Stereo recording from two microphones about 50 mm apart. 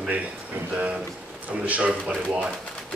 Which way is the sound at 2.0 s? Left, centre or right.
Centre.